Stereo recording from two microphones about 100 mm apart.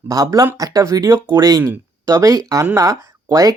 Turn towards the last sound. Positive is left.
turn(degrees=-35)  # may be behind; listen again after turning